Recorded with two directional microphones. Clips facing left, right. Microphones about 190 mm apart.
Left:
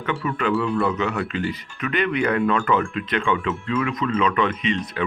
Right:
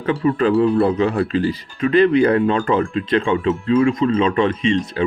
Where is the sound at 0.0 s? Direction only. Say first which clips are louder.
Right 7 dB; 35° right (ahead or behind).